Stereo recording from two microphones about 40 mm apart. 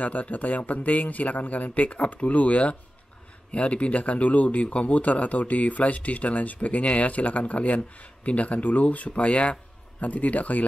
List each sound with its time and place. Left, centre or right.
0.0 s speech: left